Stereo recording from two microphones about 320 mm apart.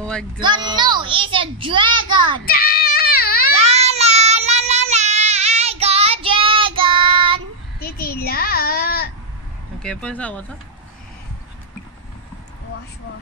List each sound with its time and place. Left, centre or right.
0.4 s a child's voice: centre
2.4 s child singing: left
3.5 s child singing: centre
7.8 s a sound: left
9.8 s speech: centre